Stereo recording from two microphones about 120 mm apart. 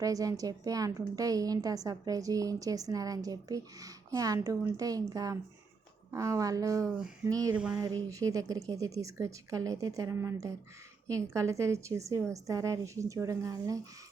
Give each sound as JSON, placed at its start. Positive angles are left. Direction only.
{"t": 0.0, "sound": "a woman's voice", "side_deg": -30}
{"t": 7.5, "sound": "a sound", "side_deg": -10}
{"t": 7.8, "sound": "a woman's voice", "side_deg": -30}